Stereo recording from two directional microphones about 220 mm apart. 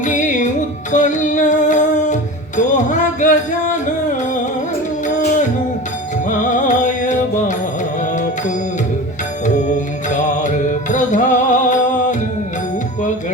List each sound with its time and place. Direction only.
0.0 s music: 35° left (ahead or behind)
0.9 s female singing: 35° left (ahead or behind)
2.6 s music: 35° left (ahead or behind)
6.4 s music: 35° left (ahead or behind)
10.2 s music: 35° left (ahead or behind)